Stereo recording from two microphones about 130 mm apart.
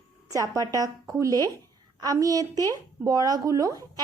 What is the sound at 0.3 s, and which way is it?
Speech, 25° right (ahead or behind).